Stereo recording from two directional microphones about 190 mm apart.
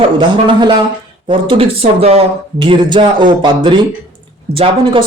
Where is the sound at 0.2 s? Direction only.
25° right (ahead or behind).